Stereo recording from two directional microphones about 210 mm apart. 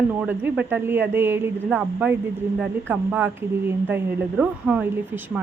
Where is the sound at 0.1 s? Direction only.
10° right (ahead or behind).